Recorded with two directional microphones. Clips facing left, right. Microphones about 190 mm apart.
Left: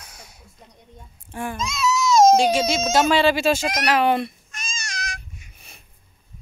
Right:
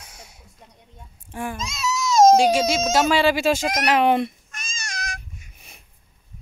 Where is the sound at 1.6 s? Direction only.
40° right (ahead or behind).